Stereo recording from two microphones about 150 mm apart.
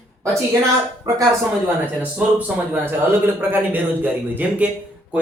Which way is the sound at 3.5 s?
10° right (ahead or behind).